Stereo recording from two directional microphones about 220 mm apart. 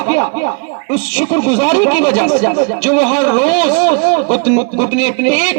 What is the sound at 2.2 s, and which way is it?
Speech, 35° left (ahead or behind).